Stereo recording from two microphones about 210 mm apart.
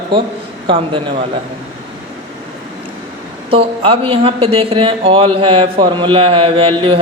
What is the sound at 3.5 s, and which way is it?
Speech, 25° right (ahead or behind).